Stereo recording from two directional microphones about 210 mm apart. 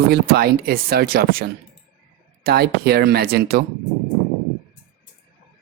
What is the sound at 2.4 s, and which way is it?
Speech, 50° right (ahead or behind).